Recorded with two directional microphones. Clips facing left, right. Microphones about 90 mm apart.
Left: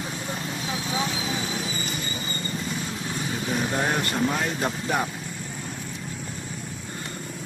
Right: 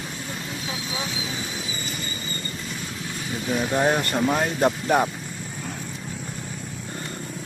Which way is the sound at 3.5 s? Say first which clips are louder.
Right 5 dB; 30° right (ahead or behind).